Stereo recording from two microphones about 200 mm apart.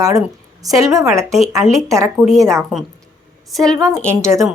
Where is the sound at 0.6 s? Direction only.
15° right (ahead or behind).